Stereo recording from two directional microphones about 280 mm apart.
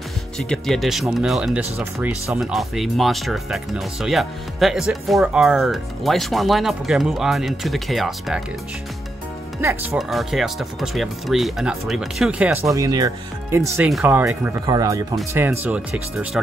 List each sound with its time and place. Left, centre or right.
0.4 s speech: centre
9.6 s speech: centre